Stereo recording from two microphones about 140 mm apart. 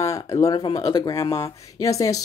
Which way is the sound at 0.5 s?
35° left (ahead or behind).